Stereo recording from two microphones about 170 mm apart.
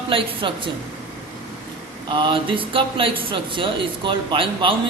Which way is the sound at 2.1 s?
30° right (ahead or behind).